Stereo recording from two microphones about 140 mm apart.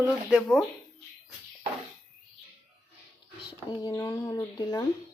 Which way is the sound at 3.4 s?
30° left (ahead or behind).